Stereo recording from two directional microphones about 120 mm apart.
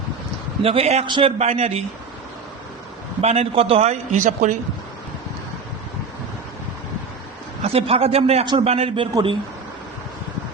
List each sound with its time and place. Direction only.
0.6 s a man's voice: 55° right (ahead or behind)
1.0 s a man's voice: 40° right (ahead or behind)
1.4 s a man's voice: 60° right (ahead or behind)
3.2 s a man's voice: 60° right (ahead or behind); by 4.5 s 85° right
7.6 s a man's voice: 55° right (ahead or behind)